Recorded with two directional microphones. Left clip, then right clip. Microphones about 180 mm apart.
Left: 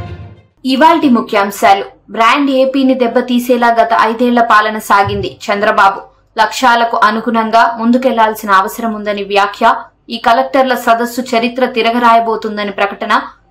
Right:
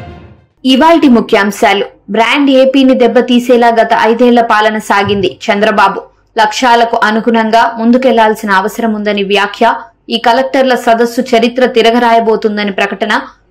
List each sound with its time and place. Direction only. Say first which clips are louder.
0.7 s a woman's voice: right 2 dB; 20° right (ahead or behind)